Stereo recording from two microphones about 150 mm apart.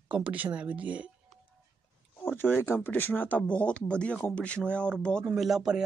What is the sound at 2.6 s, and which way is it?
Speech, 15° left (ahead or behind).